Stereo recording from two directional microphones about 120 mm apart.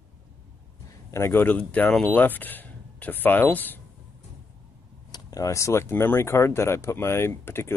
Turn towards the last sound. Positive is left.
turn(degrees=20)  # may be behind; listen again after turning